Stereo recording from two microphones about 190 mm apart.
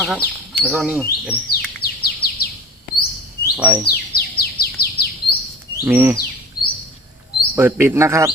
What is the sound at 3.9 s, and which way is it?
Bird, 55° left (ahead or behind).